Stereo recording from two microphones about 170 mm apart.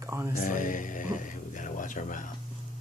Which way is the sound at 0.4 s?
50° left (ahead or behind).